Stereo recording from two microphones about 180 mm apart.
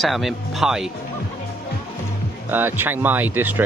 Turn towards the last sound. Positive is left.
turn(degrees=-10)  # may be behind; listen again after turning